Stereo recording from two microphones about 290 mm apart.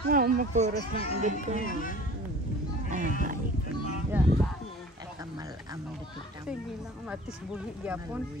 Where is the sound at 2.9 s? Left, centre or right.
Right.